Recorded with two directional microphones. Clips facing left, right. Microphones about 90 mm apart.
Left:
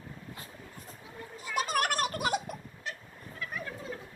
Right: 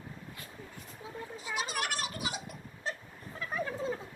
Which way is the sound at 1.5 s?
50° left (ahead or behind).